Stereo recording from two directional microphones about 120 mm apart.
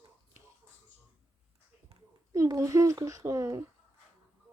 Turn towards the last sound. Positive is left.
turn(degrees=-25)  # may be behind; listen again after turning